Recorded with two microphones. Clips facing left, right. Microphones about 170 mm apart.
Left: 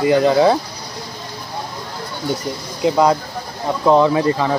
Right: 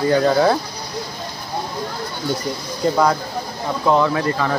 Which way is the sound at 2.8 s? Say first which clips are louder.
Left 3 dB; 15° left (ahead or behind).